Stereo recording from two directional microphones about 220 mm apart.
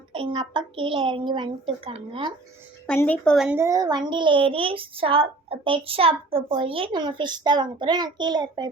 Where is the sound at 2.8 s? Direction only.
10° left (ahead or behind); by 8.7 s 20° right (ahead or behind).